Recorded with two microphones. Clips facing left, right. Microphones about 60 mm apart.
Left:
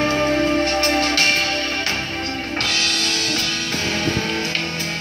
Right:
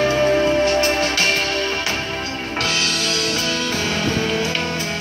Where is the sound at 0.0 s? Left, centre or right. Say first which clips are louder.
Right 2 dB; centre.